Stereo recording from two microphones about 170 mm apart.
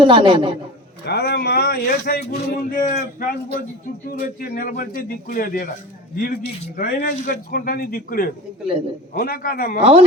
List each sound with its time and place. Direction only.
0.0 s a man's voice: 30° right (ahead or behind)
1.0 s a man's voice: 75° left (ahead or behind)